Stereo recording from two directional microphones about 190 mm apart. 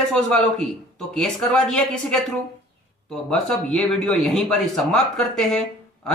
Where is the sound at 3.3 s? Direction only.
5° left (ahead or behind).